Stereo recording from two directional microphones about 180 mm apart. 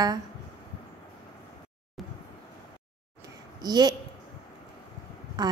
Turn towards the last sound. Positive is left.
turn(degrees=-20)  # may be behind; listen again after turning